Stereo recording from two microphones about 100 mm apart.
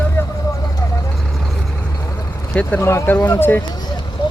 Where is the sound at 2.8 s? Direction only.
25° left (ahead or behind).